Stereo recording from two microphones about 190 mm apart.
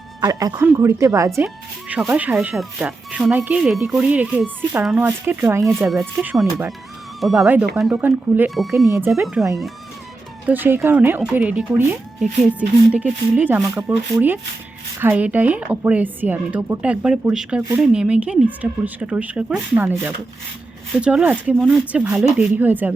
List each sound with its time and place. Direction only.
0.2 s speech: 20° right (ahead or behind)
5.6 s speech: centre (ahead or behind)
8.9 s speech: 15° right (ahead or behind)
9.2 s speech: centre (ahead or behind)